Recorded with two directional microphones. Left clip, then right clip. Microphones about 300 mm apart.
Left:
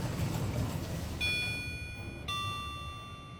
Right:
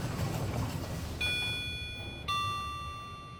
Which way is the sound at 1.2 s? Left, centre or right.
Centre.